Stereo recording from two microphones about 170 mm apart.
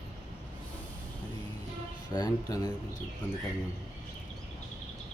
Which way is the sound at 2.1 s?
20° left (ahead or behind).